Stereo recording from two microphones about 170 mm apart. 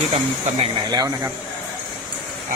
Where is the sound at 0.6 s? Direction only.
25° right (ahead or behind).